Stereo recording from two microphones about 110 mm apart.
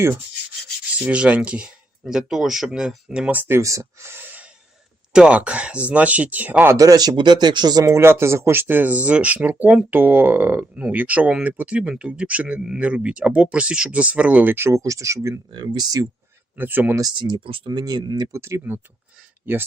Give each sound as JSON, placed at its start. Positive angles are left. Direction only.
{"t": 0.9, "sound": "speech", "side_deg": -10}
{"t": 3.4, "sound": "speech", "side_deg": -25}
{"t": 6.7, "sound": "speech", "side_deg": -35}
{"t": 15.5, "sound": "speech", "side_deg": -40}
{"t": 16.6, "sound": "speech", "side_deg": -15}
{"t": 17.0, "sound": "speech", "side_deg": -40}
{"t": 17.7, "sound": "speech", "side_deg": -35}
{"t": 18.3, "sound": "speech", "side_deg": -25}